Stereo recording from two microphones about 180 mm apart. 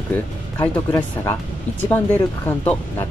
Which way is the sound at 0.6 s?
10° left (ahead or behind).